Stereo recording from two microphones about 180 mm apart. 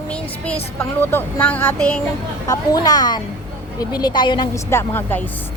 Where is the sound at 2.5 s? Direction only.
20° left (ahead or behind).